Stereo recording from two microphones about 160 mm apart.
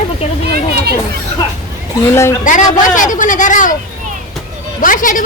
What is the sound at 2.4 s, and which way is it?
Speech, 55° left (ahead or behind).